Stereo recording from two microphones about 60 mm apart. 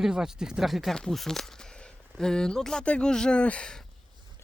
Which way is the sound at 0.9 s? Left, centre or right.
Centre.